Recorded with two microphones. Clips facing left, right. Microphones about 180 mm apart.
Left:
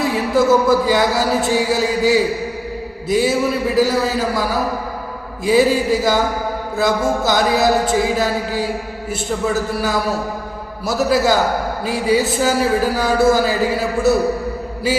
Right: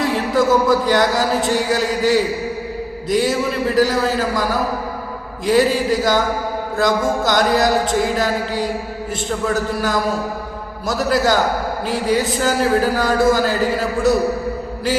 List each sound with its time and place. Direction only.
0.0 s a man's voice: 5° left (ahead or behind)
5.5 s a man's voice: 5° left (ahead or behind)
6.7 s chant: 5° left (ahead or behind)
10.8 s a man's voice: 5° left (ahead or behind)